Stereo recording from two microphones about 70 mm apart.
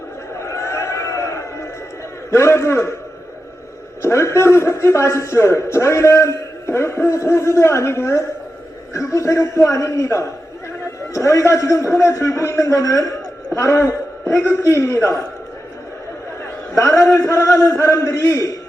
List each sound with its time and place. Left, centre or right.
0.3 s a sound: left
2.3 s a man's voice: left
4.0 s a man's voice: left
16.7 s a man's voice: left